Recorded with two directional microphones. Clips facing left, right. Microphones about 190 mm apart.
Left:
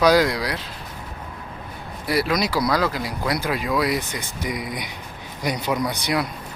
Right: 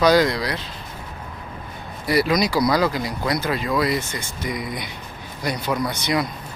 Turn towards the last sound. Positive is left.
turn(degrees=10)  # may be behind; listen again after turning